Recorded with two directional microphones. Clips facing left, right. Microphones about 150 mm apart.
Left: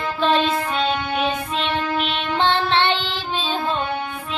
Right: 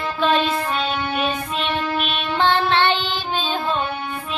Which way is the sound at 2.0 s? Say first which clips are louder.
Even; 25° left (ahead or behind).